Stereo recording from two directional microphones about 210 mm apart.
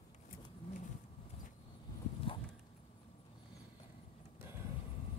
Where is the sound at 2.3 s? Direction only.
25° left (ahead or behind).